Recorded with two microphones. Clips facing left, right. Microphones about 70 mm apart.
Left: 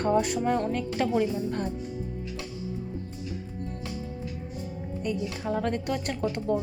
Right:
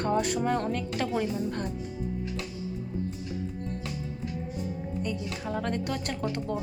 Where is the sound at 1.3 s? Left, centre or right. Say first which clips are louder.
Left 1 dB; left.